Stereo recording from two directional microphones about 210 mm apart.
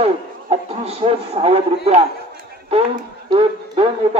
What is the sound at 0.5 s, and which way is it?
Speech, 30° right (ahead or behind).